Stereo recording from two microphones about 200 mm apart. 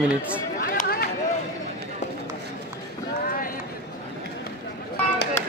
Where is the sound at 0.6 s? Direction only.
45° left (ahead or behind).